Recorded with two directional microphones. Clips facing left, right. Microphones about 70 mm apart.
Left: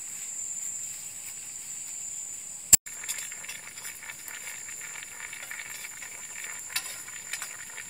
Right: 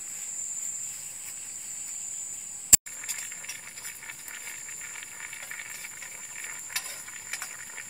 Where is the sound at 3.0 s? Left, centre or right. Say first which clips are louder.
Even; centre.